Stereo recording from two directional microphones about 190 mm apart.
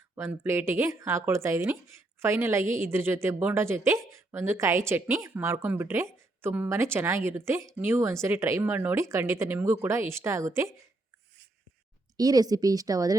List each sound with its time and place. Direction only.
0.2 s a woman's voice: 10° right (ahead or behind)
12.1 s a woman's voice: 20° right (ahead or behind)